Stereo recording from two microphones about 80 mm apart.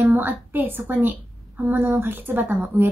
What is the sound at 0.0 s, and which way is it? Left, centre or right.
A woman's voice, right.